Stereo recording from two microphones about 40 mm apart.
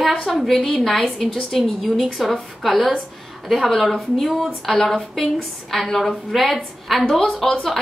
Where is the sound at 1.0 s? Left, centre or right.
Centre.